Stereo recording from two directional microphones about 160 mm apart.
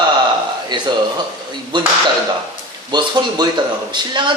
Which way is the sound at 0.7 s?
30° right (ahead or behind).